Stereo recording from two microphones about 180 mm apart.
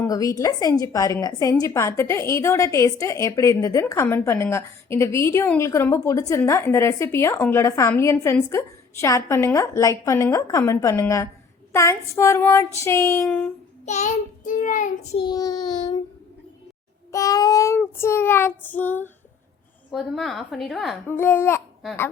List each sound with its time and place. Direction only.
0.0 s child singing: 20° left (ahead or behind)
0.8 s a woman's voice: 20° left (ahead or behind)
13.8 s child singing: 40° left (ahead or behind)
15.2 s child singing: 20° left (ahead or behind)
17.1 s a woman's voice: 20° left (ahead or behind)
19.9 s a woman's voice: centre (ahead or behind)
21.1 s a woman's voice: 15° left (ahead or behind)